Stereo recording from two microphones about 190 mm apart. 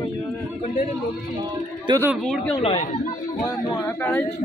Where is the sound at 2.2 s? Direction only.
Centre (ahead or behind).